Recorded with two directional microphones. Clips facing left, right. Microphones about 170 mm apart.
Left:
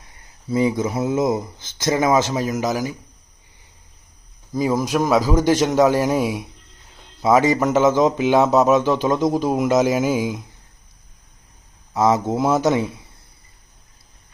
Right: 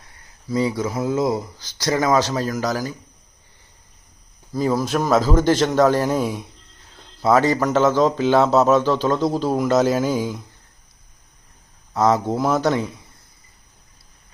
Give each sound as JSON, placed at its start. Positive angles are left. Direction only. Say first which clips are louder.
{"t": 0.0, "sound": "speech", "louder": "left 3 dB", "side_deg": 20}
{"t": 4.5, "sound": "speech", "louder": "left 1 dB", "side_deg": 15}
{"t": 11.9, "sound": "speech", "louder": "even", "side_deg": 15}